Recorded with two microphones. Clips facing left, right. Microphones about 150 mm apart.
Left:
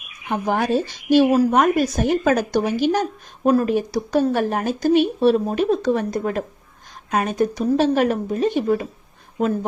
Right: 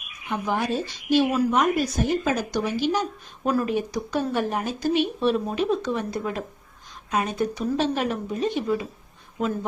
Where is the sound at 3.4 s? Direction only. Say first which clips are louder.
Left 7 dB; 30° left (ahead or behind).